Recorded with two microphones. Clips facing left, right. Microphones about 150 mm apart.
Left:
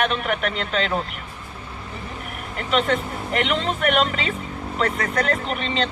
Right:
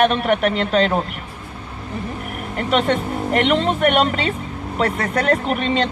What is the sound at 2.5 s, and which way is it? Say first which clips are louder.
Speech: right 3 dB; 40° right (ahead or behind).